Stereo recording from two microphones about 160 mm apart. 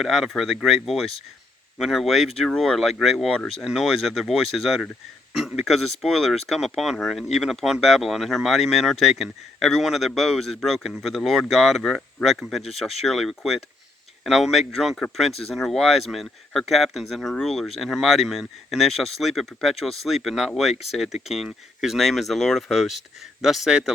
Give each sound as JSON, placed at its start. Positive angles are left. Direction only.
{"t": 0.0, "sound": "speech", "side_deg": 0}